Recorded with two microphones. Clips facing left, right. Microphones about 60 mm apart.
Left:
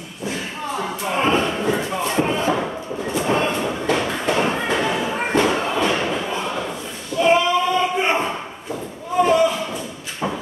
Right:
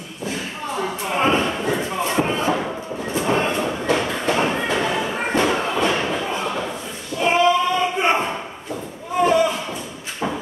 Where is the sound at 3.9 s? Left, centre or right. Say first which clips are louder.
Even; centre.